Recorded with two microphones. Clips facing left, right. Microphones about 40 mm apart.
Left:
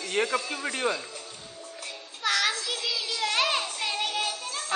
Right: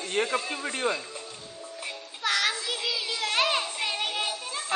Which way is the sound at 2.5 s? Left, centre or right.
Centre.